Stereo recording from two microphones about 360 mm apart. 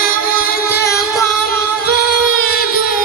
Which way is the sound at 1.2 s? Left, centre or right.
Centre.